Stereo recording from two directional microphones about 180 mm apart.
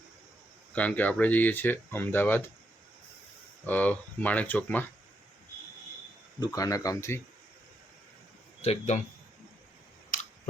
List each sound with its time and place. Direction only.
0.7 s speech: 10° left (ahead or behind)
3.7 s speech: 10° left (ahead or behind)
6.4 s speech: 20° left (ahead or behind)
8.6 s a man's voice: 35° left (ahead or behind)